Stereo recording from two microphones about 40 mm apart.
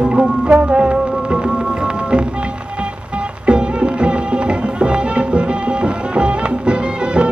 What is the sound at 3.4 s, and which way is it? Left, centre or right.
Music, right.